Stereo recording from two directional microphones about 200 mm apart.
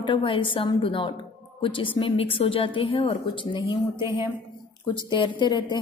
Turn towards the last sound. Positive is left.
turn(degrees=20)  # may be behind; listen again after turning